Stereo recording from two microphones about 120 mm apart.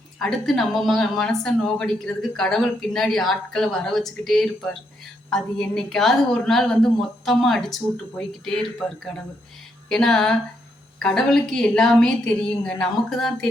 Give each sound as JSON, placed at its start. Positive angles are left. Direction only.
{"t": 0.2, "sound": "speech", "side_deg": 5}
{"t": 9.9, "sound": "speech", "side_deg": 5}